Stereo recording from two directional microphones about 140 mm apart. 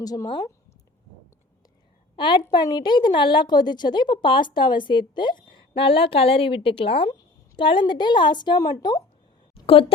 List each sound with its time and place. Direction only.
0.0 s speech: 25° left (ahead or behind)
2.1 s a woman's voice: 35° left (ahead or behind)